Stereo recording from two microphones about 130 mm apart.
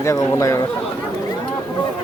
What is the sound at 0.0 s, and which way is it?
Speech, 20° left (ahead or behind).